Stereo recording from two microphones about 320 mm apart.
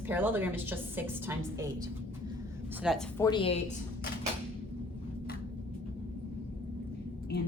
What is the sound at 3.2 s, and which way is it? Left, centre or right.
Speech, centre.